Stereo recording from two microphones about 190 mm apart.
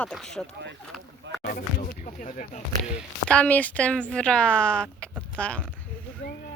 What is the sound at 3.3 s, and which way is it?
Speech, 5° left (ahead or behind).